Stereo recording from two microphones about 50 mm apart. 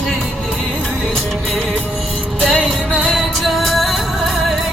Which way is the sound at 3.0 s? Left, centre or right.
Centre.